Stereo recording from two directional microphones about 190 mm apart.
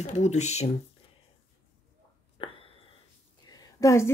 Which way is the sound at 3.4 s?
20° left (ahead or behind).